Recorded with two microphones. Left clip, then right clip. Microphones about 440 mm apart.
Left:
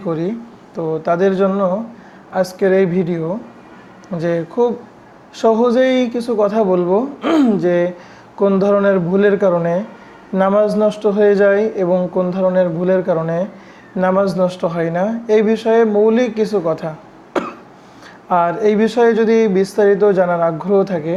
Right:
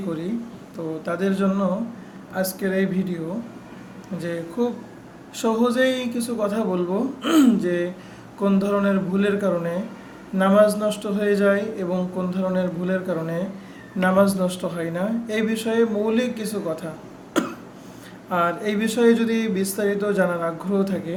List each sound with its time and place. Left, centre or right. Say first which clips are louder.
1.0 s speech: left 10 dB; left
4.2 s speech: left 10 dB; left
17.3 s cough: left 4 dB; left
18.3 s speech: left 8 dB; left